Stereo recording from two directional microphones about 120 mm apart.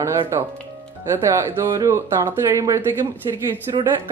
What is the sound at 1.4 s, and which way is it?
Speech, 25° right (ahead or behind).